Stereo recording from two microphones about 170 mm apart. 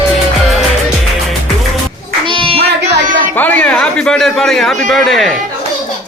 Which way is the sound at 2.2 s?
30° right (ahead or behind).